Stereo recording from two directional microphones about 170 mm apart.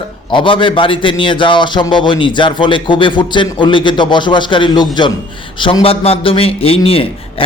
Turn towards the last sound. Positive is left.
turn(degrees=35)  # may be behind; listen again after turning